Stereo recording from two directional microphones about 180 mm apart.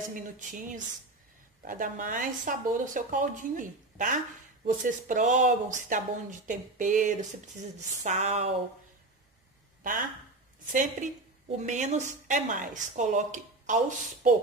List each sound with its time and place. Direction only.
0.1 s a woman's voice: 45° right (ahead or behind)
10.7 s a woman's voice: 45° right (ahead or behind)